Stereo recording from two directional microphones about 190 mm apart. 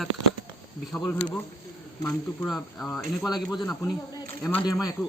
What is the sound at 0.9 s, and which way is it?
Speech, 5° left (ahead or behind).